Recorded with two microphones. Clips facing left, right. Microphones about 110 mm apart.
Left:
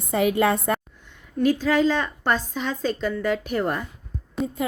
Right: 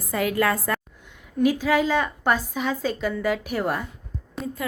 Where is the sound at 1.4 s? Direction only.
10° right (ahead or behind).